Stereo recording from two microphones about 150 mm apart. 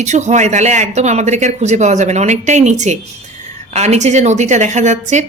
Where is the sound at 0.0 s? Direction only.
50° right (ahead or behind).